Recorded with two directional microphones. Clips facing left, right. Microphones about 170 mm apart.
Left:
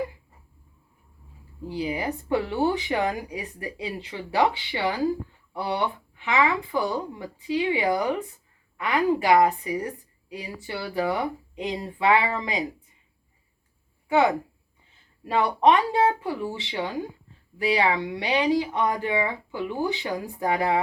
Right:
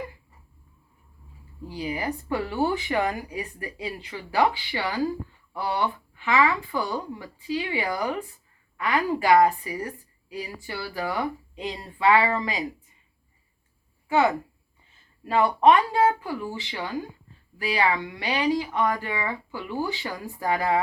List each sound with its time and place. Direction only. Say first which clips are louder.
1.6 s a woman's voice: left 2 dB; 25° left (ahead or behind)
15.2 s a woman's voice: right 1 dB; 20° left (ahead or behind)